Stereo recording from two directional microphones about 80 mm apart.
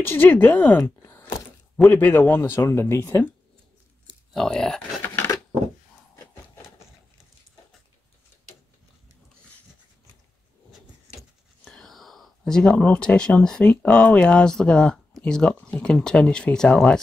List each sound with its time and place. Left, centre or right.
0.0 s speech: left
4.3 s speech: centre
10.7 s vehicle: centre
11.7 s speech: centre